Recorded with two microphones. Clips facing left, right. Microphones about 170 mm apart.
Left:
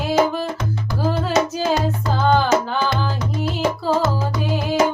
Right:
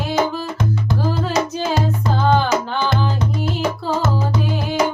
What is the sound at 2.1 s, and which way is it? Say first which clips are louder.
Music: even; centre (ahead or behind).